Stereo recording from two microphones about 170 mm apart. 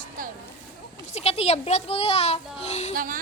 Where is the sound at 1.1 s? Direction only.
40° left (ahead or behind).